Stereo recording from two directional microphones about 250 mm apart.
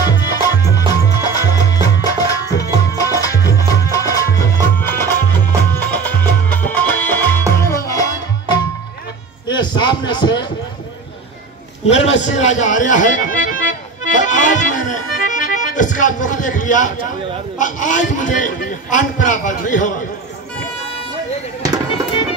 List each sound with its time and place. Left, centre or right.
0.0 s music: centre
9.5 s a sound: centre
11.8 s music: left
17.6 s a man's voice: left